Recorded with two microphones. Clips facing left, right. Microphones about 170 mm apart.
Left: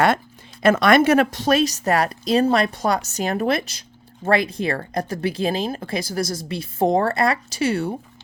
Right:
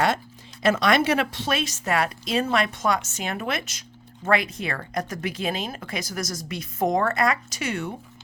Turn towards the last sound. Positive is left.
turn(degrees=30)  # may be behind; listen again after turning